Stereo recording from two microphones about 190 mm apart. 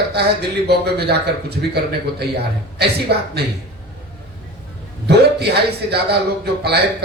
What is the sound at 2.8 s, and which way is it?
Speech, 60° right (ahead or behind).